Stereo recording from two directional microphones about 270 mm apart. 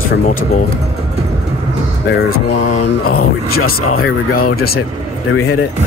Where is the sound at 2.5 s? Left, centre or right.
Left.